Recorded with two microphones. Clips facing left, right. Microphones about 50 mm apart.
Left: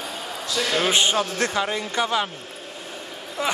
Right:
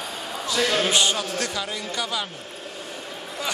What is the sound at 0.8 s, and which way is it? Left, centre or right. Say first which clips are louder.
Speech: left 2 dB; left.